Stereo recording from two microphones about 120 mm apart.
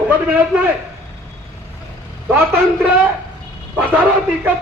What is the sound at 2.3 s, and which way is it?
Speech, 15° right (ahead or behind).